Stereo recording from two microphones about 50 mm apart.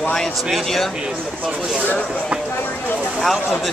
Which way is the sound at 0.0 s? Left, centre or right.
Centre.